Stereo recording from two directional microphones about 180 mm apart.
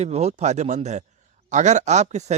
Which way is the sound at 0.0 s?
35° right (ahead or behind).